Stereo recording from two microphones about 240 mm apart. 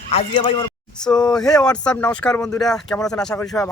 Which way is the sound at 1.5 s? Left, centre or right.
Centre.